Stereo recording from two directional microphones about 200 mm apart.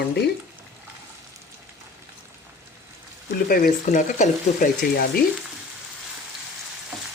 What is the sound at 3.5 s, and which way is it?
A woman's voice, 40° left (ahead or behind).